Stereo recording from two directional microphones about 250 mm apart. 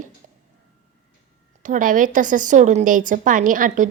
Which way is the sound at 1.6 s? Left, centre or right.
Right.